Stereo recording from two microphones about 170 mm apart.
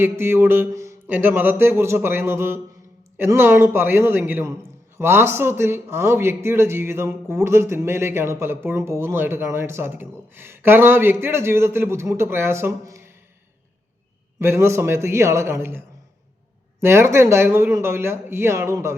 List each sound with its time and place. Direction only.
0.0 s a man's voice: 15° right (ahead or behind)
14.3 s a man's voice: 15° right (ahead or behind)
16.8 s a man's voice: 15° right (ahead or behind)